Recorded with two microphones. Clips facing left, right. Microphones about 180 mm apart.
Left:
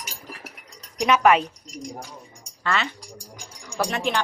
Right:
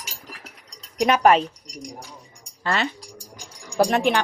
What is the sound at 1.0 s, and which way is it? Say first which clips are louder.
Speech: right 1 dB; 45° right (ahead or behind).